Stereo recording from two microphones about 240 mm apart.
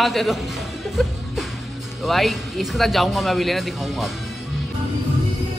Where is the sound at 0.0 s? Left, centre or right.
Centre.